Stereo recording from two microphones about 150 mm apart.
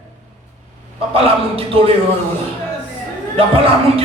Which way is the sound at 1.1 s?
40° right (ahead or behind).